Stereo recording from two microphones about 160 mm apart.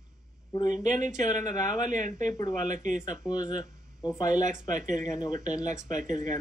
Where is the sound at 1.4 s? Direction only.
25° left (ahead or behind).